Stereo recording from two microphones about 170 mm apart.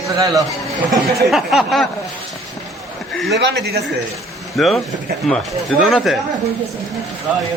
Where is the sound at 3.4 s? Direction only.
80° right.